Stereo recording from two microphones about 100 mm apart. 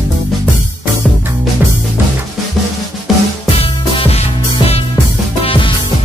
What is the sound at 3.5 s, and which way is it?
Music, 70° left (ahead or behind).